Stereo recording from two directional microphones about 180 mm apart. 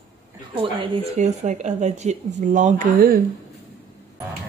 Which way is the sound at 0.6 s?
35° right (ahead or behind).